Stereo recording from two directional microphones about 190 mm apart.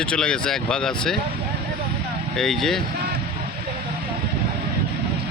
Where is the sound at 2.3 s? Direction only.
Centre (ahead or behind).